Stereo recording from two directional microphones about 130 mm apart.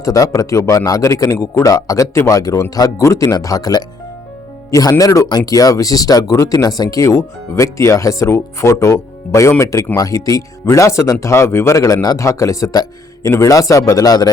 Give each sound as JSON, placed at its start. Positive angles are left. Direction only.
{"t": 0.0, "sound": "speech", "side_deg": 25}